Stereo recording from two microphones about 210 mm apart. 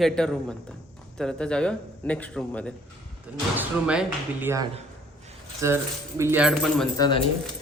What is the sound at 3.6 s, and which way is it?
Speech, 5° right (ahead or behind).